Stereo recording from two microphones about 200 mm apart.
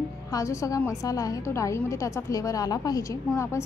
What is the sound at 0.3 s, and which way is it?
A woman's voice, 15° left (ahead or behind).